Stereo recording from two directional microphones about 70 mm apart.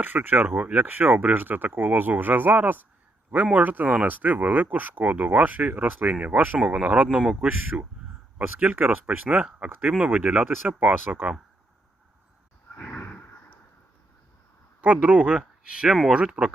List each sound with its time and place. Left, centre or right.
0.0 s speech: right
13.0 s a sound: left
15.0 s speech: centre